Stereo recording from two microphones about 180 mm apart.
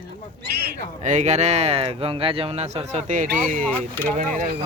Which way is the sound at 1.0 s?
40° right (ahead or behind).